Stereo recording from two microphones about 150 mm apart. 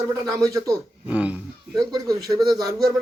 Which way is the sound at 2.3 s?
25° right (ahead or behind).